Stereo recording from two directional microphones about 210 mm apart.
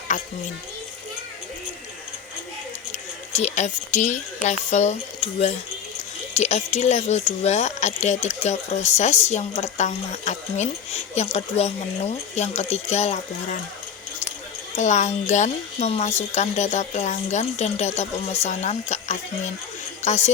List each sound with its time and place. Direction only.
0.1 s a woman's voice: 35° left (ahead or behind)
2.9 s a woman's voice: 35° left (ahead or behind)
14.8 s a woman's voice: 35° left (ahead or behind)